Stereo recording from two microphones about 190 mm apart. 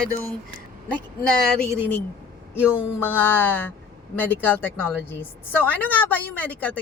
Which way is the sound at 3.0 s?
10° left (ahead or behind).